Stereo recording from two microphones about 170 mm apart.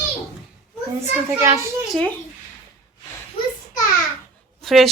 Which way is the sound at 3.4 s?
60° left (ahead or behind).